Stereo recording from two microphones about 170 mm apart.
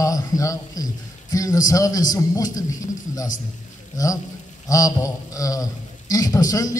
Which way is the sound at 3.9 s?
20° left (ahead or behind).